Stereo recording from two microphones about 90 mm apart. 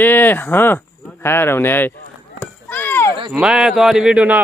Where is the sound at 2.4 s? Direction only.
20° left (ahead or behind).